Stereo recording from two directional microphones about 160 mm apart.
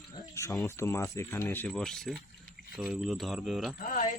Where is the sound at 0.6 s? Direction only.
15° left (ahead or behind); by 3.8 s centre (ahead or behind).